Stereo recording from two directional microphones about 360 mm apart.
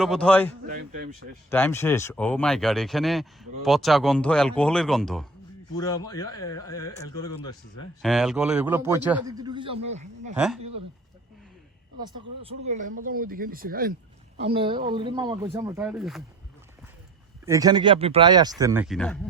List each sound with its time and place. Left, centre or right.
0.0 s speech: centre
10.3 s speech: centre
10.6 s speech: right
12.0 s speech: centre
17.4 s speech: centre